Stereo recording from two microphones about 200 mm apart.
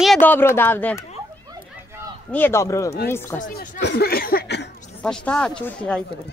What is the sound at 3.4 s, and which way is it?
Speech, 40° left (ahead or behind).